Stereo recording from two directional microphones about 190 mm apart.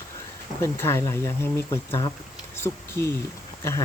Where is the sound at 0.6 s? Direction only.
15° left (ahead or behind).